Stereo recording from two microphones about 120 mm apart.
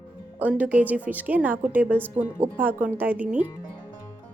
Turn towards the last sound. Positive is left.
turn(degrees=-10)  # may be behind; listen again after turning